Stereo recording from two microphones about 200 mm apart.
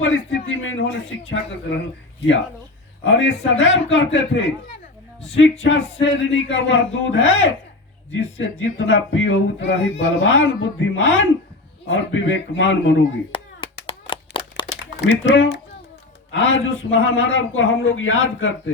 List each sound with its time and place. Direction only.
0.6 s speech: 75° left (ahead or behind)
3.0 s speech: 70° left (ahead or behind)
5.3 s speech: 70° left (ahead or behind)
13.3 s clapping: 25° left (ahead or behind)
15.0 s speech: 65° left (ahead or behind)